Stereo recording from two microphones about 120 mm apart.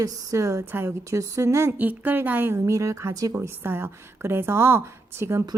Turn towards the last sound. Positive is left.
turn(degrees=-25)  # may be behind; listen again after turning